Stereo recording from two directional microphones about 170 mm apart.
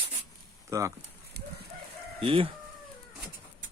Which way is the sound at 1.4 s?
70° right (ahead or behind).